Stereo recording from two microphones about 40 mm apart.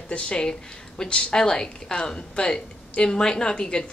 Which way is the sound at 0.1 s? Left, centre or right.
Left.